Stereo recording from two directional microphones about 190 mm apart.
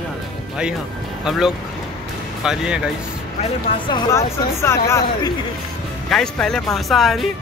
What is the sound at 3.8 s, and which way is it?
Speech, 25° left (ahead or behind).